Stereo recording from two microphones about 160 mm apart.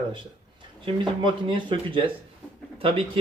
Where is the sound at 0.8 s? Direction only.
30° right (ahead or behind).